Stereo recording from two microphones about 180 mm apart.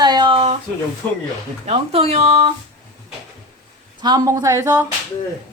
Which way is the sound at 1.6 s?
35° right (ahead or behind).